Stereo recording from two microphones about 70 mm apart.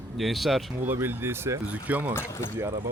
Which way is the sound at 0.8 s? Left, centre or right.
Right.